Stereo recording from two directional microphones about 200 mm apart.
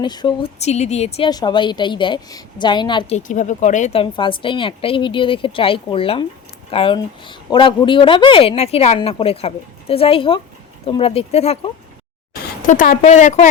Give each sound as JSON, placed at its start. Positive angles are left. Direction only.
{"t": 0.0, "sound": "speech", "side_deg": 20}
{"t": 1.3, "sound": "speech", "side_deg": 20}
{"t": 3.2, "sound": "speech", "side_deg": 40}
{"t": 12.4, "sound": "speech", "side_deg": 40}